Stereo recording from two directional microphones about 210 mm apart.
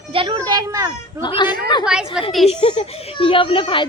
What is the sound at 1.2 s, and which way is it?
Speech, 20° left (ahead or behind).